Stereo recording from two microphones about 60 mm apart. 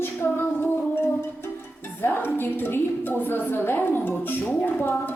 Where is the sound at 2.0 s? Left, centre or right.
Left.